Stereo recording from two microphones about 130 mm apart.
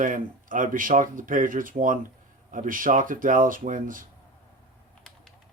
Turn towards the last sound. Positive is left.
turn(degrees=-90)